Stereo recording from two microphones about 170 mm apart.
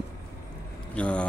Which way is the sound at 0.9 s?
5° left (ahead or behind).